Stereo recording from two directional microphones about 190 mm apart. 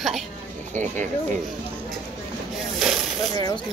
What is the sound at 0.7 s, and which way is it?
Speech, 40° right (ahead or behind).